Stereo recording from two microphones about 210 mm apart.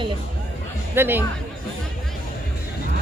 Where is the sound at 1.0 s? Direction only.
10° right (ahead or behind).